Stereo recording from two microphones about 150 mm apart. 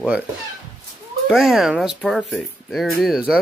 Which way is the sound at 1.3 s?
Centre (ahead or behind).